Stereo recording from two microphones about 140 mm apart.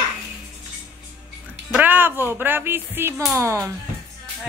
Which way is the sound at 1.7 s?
10° right (ahead or behind).